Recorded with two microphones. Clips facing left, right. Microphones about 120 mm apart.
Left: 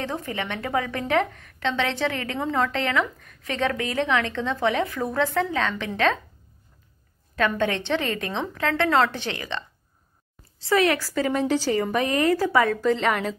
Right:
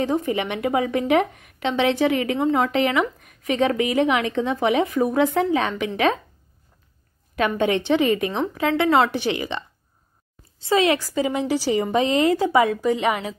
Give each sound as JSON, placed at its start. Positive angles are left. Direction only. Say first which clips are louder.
{"t": 0.0, "sound": "a woman's voice", "louder": "right 7 dB", "side_deg": -15}
{"t": 7.3, "sound": "a woman's voice", "louder": "right 3 dB", "side_deg": -15}